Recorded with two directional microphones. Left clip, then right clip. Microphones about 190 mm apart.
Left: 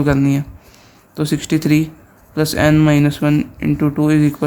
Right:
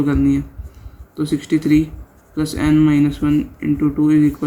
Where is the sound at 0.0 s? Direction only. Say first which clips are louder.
Left 1 dB; 55° left (ahead or behind).